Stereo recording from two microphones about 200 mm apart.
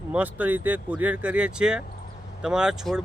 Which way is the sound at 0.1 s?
10° right (ahead or behind).